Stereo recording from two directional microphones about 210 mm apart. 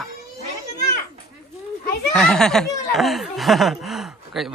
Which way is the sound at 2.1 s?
5° left (ahead or behind).